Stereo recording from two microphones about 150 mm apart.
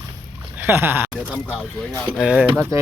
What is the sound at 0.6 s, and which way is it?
Speech, 15° right (ahead or behind).